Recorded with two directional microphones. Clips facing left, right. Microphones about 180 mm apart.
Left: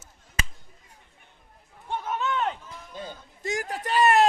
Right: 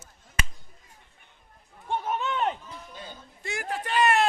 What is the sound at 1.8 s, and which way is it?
Run, 15° right (ahead or behind).